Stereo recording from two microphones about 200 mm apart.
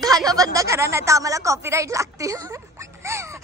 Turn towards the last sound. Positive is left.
turn(degrees=-15)  # may be behind; listen again after turning